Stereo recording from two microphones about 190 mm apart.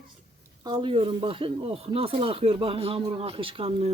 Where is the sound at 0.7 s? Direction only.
25° right (ahead or behind).